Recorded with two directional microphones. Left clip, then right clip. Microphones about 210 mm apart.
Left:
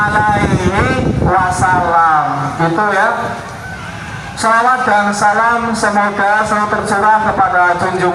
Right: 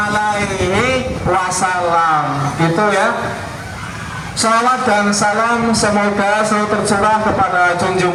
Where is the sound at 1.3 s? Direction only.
50° right (ahead or behind).